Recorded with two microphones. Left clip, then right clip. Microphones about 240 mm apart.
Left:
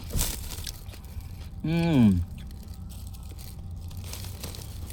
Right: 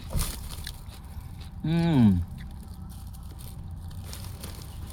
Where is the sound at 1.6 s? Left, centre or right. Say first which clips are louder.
Left 1 dB; right.